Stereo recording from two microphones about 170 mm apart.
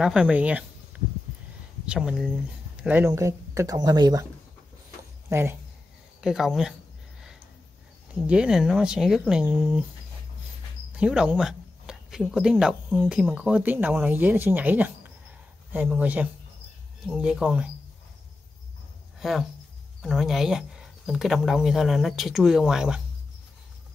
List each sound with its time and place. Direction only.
0.0 s speech: 5° right (ahead or behind)
1.9 s speech: 5° right (ahead or behind); by 4.3 s 20° right (ahead or behind)
5.3 s speech: 15° right (ahead or behind)
6.2 s speech: centre (ahead or behind)
8.3 s speech: 5° right (ahead or behind)
10.9 s speech: 5° right (ahead or behind)
19.1 s a sound: centre (ahead or behind)
20.0 s speech: centre (ahead or behind)